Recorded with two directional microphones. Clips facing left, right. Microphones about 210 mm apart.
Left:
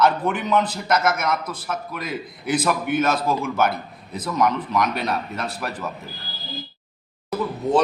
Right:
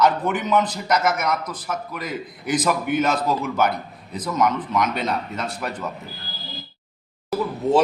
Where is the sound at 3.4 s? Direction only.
5° left (ahead or behind).